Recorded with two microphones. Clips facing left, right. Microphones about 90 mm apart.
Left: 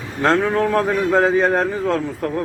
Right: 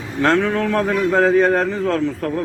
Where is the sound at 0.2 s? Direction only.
20° left (ahead or behind).